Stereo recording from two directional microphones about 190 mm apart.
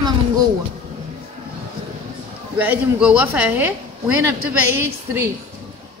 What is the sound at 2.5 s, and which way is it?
Speech, 10° right (ahead or behind).